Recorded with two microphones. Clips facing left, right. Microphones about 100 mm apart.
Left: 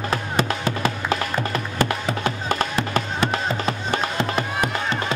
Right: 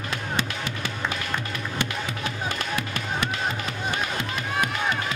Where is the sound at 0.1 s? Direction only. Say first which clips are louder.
Left 5 dB; 40° left (ahead or behind).